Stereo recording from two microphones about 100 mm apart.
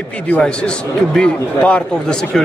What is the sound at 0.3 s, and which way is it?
A man's voice, 10° left (ahead or behind).